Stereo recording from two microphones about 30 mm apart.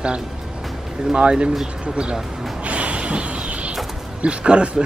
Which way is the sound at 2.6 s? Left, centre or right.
Right.